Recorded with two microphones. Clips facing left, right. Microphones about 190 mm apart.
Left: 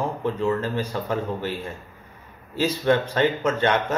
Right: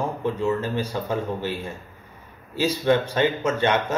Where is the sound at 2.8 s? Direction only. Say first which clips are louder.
Even; 15° right (ahead or behind).